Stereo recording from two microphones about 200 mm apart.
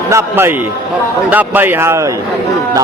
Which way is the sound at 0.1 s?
10° right (ahead or behind).